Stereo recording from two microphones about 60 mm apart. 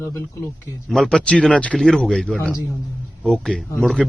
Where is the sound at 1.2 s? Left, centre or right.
Centre.